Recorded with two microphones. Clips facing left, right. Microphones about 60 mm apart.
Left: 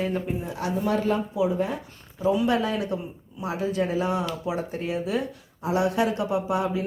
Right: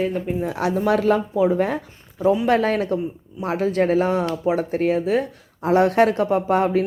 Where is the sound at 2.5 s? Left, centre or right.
Right.